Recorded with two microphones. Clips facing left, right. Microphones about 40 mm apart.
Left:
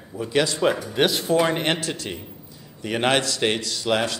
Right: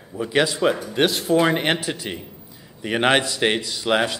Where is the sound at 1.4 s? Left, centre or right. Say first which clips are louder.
Right 3 dB; centre.